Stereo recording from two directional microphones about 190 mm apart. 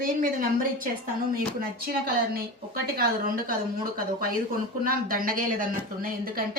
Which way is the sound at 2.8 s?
55° right (ahead or behind).